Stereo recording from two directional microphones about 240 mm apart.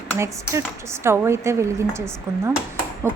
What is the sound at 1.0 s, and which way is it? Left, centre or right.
A woman's voice, centre.